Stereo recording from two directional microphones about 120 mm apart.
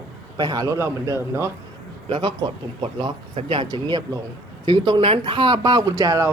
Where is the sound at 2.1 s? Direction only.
35° right (ahead or behind).